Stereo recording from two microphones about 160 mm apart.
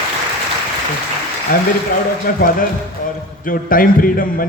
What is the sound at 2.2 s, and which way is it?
A man's voice, 60° left (ahead or behind).